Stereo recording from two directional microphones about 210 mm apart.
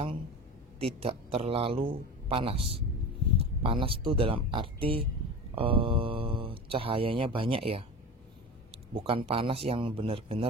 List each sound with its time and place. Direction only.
0.7 s speech: 25° right (ahead or behind)